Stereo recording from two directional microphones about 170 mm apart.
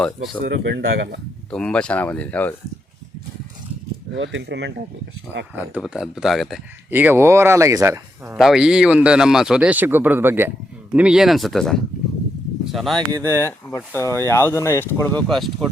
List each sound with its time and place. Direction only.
0.4 s speech: 90° right
1.5 s speech: 5° left (ahead or behind)
4.1 s speech: 90° right
5.5 s speech: 5° right (ahead or behind)
6.9 s speech: 10° right (ahead or behind)
8.4 s speech: 5° right (ahead or behind)
13.0 s speech: 25° right (ahead or behind)
13.7 s speech: 10° left (ahead or behind)
15.3 s speech: centre (ahead or behind)